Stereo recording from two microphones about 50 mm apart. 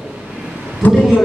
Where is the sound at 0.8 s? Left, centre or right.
Left.